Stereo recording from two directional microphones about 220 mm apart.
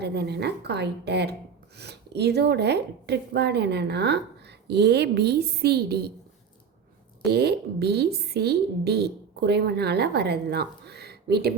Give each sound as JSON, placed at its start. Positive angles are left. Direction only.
{"t": 0.0, "sound": "speech", "side_deg": -50}
{"t": 7.3, "sound": "speech", "side_deg": -45}